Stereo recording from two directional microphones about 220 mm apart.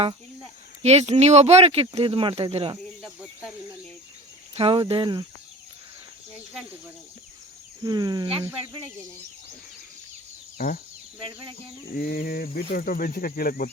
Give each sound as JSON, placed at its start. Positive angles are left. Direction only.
{"t": 0.8, "sound": "speech", "side_deg": -30}
{"t": 4.5, "sound": "speech", "side_deg": -25}
{"t": 6.3, "sound": "speech", "side_deg": 0}
{"t": 7.9, "sound": "speech", "side_deg": -15}
{"t": 11.9, "sound": "speech", "side_deg": 40}